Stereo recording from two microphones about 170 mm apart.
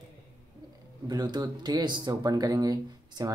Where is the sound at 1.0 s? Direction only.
25° right (ahead or behind).